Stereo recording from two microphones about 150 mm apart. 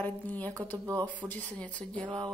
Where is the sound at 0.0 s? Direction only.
10° left (ahead or behind).